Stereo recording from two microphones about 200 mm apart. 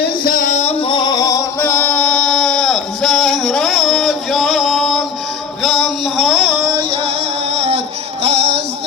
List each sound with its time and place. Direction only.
0.0 s music: 45° left (ahead or behind); by 5.0 s centre (ahead or behind)
5.6 s a sound: centre (ahead or behind)
6.7 s music: 25° right (ahead or behind)
8.2 s music: 30° right (ahead or behind)